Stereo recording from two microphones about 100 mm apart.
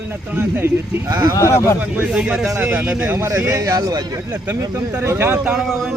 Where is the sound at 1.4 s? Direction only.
30° left (ahead or behind).